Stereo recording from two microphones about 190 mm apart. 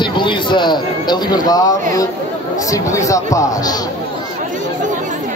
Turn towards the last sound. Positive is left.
turn(degrees=20)  # may be behind; listen again after turning